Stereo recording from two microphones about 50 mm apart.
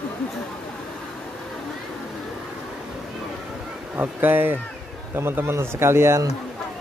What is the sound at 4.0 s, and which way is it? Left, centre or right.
Speech, right.